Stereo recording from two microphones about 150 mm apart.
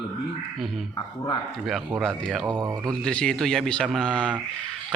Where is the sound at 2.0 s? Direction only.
Centre (ahead or behind).